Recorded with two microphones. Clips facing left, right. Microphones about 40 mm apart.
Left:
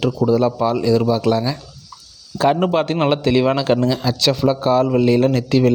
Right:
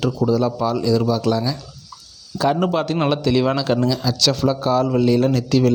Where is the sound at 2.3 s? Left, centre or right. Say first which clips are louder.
Left 3 dB; left.